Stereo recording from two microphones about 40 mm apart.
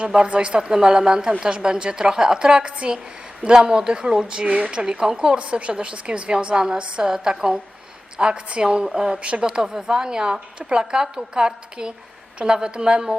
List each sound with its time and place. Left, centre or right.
0.3 s a woman's voice: right